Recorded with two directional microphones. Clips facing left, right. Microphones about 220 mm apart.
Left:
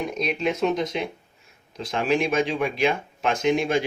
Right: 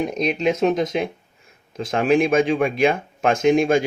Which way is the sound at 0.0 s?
45° right (ahead or behind).